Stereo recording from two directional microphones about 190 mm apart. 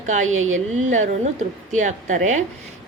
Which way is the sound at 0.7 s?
40° right (ahead or behind).